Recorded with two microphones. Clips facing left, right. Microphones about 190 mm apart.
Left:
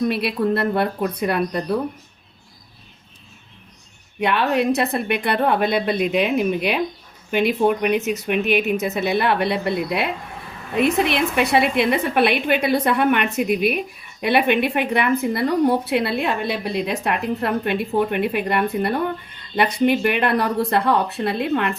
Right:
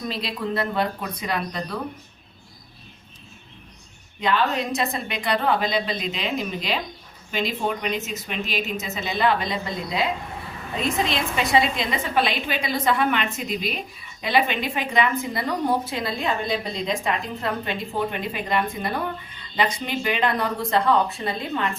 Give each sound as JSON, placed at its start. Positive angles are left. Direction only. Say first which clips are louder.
{"t": 0.1, "sound": "a woman's voice", "louder": "left 7 dB", "side_deg": 65}
{"t": 4.2, "sound": "a woman's voice", "louder": "left 4 dB", "side_deg": 65}